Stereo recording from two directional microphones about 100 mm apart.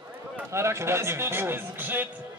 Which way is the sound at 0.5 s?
25° right (ahead or behind).